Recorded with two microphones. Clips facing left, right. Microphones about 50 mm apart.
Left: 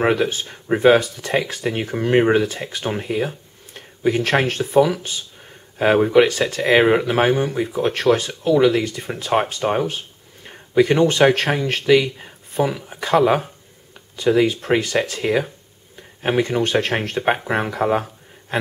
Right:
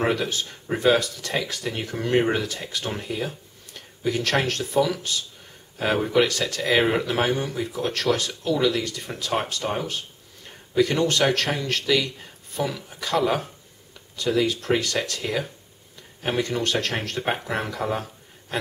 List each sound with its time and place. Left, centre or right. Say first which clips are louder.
0.0 s speech: left 5 dB; left